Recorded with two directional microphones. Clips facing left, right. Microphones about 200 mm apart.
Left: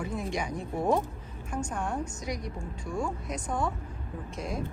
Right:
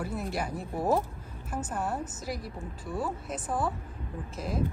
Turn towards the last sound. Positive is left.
turn(degrees=0)  # may be behind; listen again after turning